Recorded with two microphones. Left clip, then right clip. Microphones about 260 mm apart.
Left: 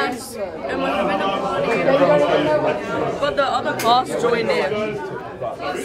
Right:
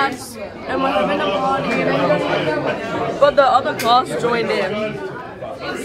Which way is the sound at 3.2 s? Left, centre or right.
Centre.